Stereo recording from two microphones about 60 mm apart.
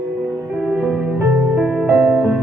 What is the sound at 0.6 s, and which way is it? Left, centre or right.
Music, right.